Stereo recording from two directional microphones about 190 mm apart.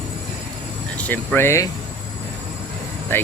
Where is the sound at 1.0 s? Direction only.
10° left (ahead or behind).